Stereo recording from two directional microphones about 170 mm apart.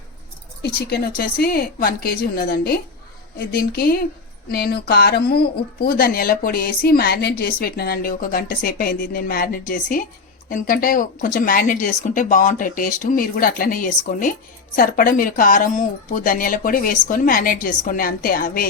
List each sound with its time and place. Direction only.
0.6 s speech: 65° left (ahead or behind)